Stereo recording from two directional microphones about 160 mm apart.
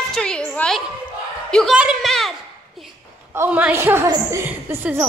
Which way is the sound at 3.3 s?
10° right (ahead or behind).